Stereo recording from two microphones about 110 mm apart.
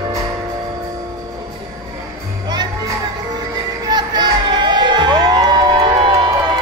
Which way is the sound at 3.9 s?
40° right (ahead or behind).